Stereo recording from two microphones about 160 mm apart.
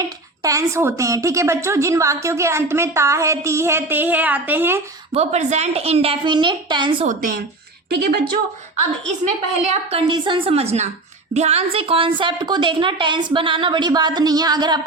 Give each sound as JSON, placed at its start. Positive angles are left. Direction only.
{"t": 0.4, "sound": "a woman's voice", "side_deg": -20}
{"t": 5.1, "sound": "a woman's voice", "side_deg": -45}
{"t": 7.0, "sound": "a woman's voice", "side_deg": -55}
{"t": 7.9, "sound": "speech", "side_deg": -70}
{"t": 9.9, "sound": "a woman's voice", "side_deg": -30}